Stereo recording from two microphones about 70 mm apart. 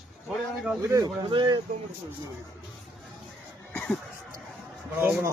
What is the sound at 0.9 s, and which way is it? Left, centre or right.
Speech, right.